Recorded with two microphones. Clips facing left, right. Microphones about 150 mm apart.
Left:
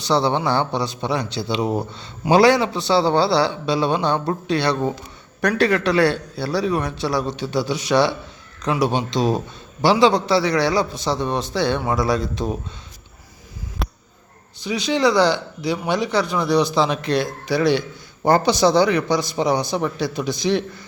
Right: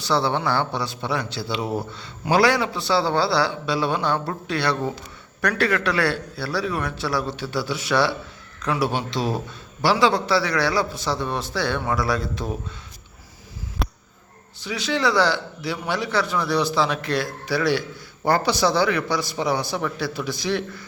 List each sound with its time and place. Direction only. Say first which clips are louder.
0.0 s speech: left 3 dB; 20° left (ahead or behind)
13.8 s a sound: even; centre (ahead or behind)
14.6 s speech: left 4 dB; 15° left (ahead or behind)